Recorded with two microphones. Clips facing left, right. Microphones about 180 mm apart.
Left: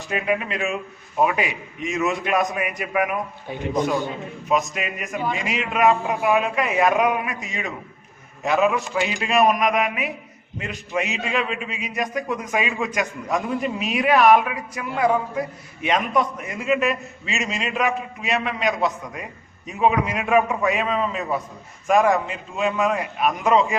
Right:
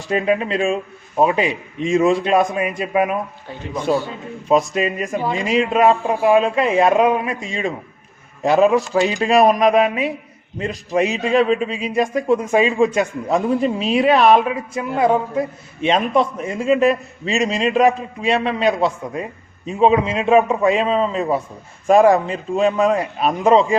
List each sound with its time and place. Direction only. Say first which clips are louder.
0.1 s a man's voice: right 6 dB; 30° right (ahead or behind)
4.4 s a man's voice: right 7 dB; 30° right (ahead or behind)